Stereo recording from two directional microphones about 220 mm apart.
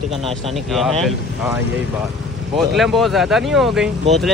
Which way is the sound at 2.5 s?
Centre (ahead or behind).